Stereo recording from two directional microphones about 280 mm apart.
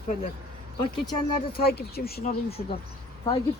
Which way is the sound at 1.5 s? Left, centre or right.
Left.